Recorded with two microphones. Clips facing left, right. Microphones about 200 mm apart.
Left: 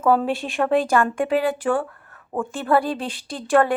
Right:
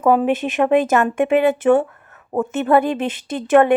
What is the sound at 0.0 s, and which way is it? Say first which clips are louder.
A woman's voice: right 4 dB; 15° right (ahead or behind).